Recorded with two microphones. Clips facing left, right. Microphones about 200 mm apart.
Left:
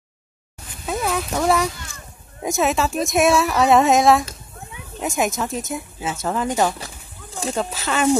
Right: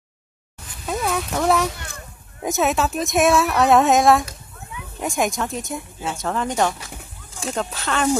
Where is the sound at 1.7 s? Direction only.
60° right (ahead or behind).